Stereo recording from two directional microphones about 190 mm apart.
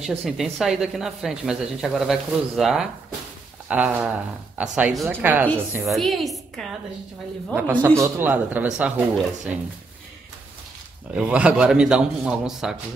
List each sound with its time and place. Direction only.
0.0 s speech: centre (ahead or behind)
7.5 s speech: 10° right (ahead or behind)
11.1 s speech: 5° right (ahead or behind)